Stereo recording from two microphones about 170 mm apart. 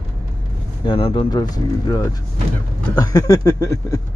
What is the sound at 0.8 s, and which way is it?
Speech, 30° left (ahead or behind).